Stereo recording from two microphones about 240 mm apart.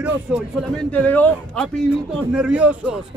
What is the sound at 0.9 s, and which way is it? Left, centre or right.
A man's voice, centre.